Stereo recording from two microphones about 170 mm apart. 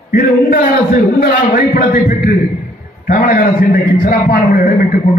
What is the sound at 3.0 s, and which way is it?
A man's voice, 50° left (ahead or behind).